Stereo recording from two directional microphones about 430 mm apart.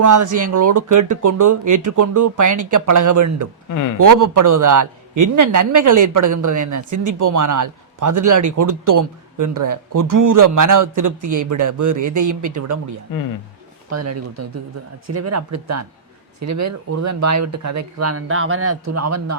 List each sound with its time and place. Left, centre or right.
0.0 s a man's voice: right
3.7 s speech: left
3.9 s a man's voice: right
13.1 s speech: left
13.9 s speech: right